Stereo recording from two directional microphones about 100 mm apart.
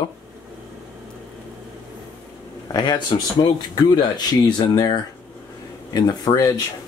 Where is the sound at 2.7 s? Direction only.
45° left (ahead or behind).